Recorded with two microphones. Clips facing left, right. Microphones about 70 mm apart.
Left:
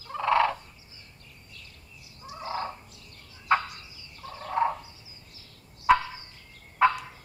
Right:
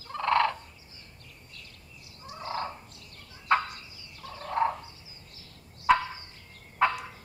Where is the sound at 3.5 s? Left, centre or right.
Centre.